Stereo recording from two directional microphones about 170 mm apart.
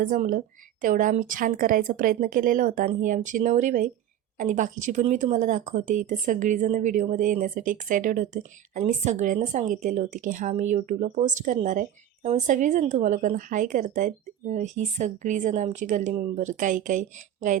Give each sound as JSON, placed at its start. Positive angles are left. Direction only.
{"t": 0.0, "sound": "speech", "side_deg": -55}